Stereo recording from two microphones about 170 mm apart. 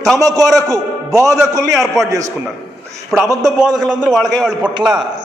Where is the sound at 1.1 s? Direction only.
Centre (ahead or behind).